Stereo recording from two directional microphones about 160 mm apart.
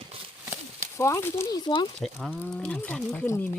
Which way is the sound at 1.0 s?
15° left (ahead or behind).